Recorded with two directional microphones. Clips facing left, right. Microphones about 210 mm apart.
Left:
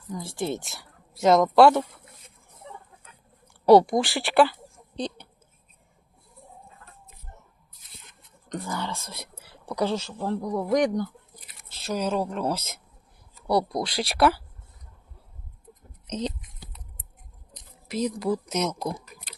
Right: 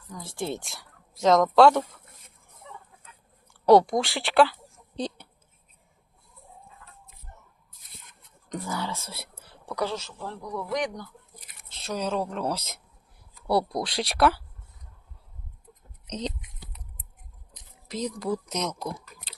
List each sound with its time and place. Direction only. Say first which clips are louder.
0.2 s speech: left 2 dB; 10° left (ahead or behind)
3.7 s speech: left 2 dB; 5° left (ahead or behind)
4.9 s a sound: even; 10° right (ahead or behind)
8.4 s speech: even; 5° right (ahead or behind)
9.4 s speech: left 3 dB; 20° left (ahead or behind); by 11.1 s 45° left (ahead or behind)
11.7 s speech: left 2 dB; 5° left (ahead or behind)
16.0 s speech: left 3 dB; 5° left (ahead or behind)
17.8 s speech: left 3 dB; 5° left (ahead or behind)